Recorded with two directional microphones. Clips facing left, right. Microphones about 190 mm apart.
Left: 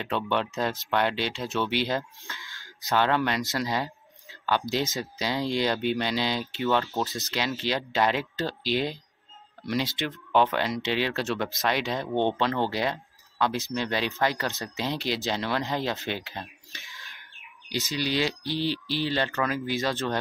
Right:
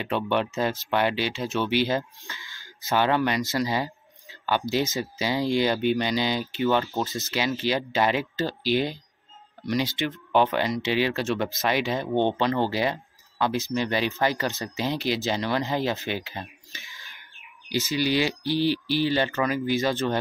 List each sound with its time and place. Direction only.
0.0 s speech: 5° right (ahead or behind)